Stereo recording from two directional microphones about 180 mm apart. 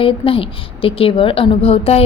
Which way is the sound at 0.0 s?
30° left (ahead or behind).